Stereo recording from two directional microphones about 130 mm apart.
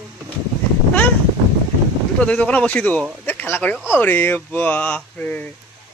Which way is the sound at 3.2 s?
15° left (ahead or behind).